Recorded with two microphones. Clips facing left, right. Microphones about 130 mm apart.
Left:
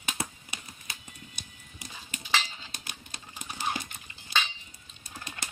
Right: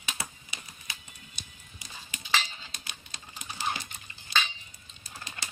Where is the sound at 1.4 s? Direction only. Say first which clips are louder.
Left 1 dB; 55° left (ahead or behind).